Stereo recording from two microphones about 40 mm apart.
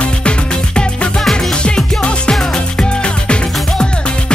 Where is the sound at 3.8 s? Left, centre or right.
Left.